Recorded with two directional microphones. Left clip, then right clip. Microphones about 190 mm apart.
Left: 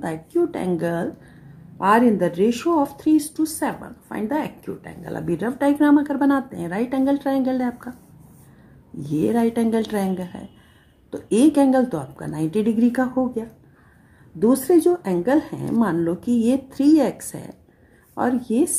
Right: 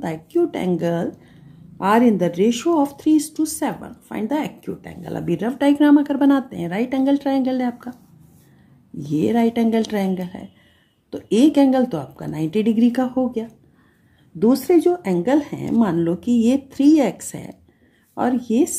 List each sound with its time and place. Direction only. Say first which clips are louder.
0.0 s speech: right 2 dB; 25° right (ahead or behind)
9.2 s speech: right 1 dB; 25° right (ahead or behind)
14.9 s speech: right 1 dB; 25° right (ahead or behind)
16.2 s speech: right 2 dB; 10° left (ahead or behind)
16.8 s speech: right 2 dB; 25° right (ahead or behind)
18.3 s speech: right 2 dB; 10° left (ahead or behind)